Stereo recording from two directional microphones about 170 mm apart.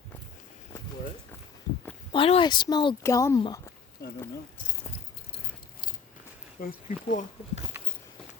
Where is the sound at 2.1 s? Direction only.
30° left (ahead or behind).